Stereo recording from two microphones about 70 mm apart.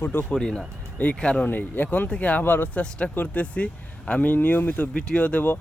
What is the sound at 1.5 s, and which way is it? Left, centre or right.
Speech, left.